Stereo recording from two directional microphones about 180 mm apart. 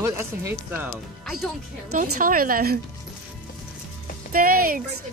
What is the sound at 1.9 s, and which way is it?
Speech, 50° right (ahead or behind).